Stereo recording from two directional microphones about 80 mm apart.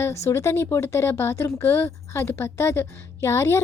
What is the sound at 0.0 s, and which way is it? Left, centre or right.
A woman's voice, left.